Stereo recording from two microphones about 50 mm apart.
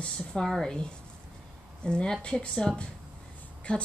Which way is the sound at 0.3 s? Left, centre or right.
Centre.